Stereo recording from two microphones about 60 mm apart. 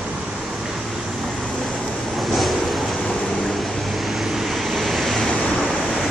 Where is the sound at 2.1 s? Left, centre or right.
Centre.